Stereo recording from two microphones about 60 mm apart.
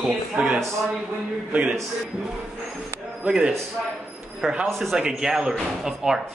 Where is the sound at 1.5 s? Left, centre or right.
Right.